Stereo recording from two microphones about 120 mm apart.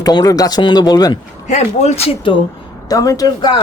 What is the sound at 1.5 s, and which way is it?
Speech, 70° left (ahead or behind).